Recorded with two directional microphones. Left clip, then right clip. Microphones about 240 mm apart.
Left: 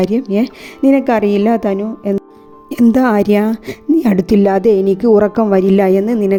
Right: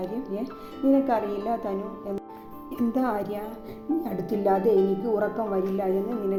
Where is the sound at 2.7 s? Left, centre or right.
Left.